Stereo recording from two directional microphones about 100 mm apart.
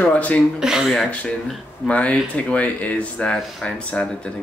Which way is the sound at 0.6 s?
5° right (ahead or behind).